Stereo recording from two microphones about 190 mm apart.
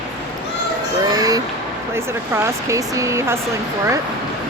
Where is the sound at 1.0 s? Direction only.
20° right (ahead or behind).